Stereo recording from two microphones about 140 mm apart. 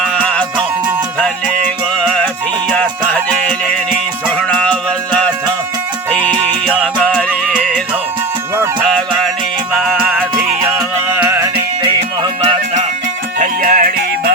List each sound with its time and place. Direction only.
1.2 s music: 10° left (ahead or behind)
4.4 s music: 10° left (ahead or behind)
9.7 s music: 5° right (ahead or behind)
12.4 s music: 50° right (ahead or behind)
13.4 s music: 80° right